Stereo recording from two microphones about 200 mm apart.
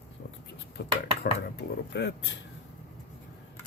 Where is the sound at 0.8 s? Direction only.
55° left (ahead or behind).